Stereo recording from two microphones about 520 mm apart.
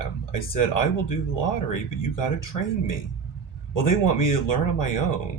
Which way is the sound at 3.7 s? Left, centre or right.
Left.